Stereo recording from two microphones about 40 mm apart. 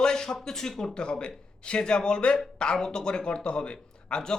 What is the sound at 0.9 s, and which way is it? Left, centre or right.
A man's voice, left.